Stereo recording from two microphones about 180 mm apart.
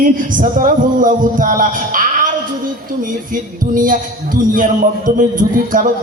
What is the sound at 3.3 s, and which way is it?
Speech, 50° right (ahead or behind).